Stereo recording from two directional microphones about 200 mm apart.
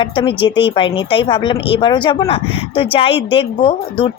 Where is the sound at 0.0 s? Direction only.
25° left (ahead or behind).